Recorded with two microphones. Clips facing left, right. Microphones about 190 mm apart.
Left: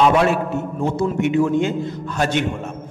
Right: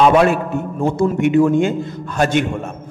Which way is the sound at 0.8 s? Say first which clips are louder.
Right 4 dB; 50° right (ahead or behind).